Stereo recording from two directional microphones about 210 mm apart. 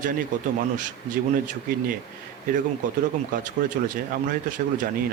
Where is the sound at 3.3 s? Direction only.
40° right (ahead or behind).